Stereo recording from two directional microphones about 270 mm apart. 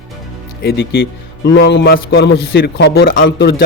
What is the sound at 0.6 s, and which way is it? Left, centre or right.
A man's voice, left.